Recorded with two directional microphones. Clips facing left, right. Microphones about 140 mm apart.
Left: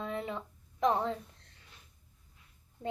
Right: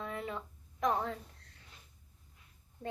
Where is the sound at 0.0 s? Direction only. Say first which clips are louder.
Left 3 dB; 25° left (ahead or behind).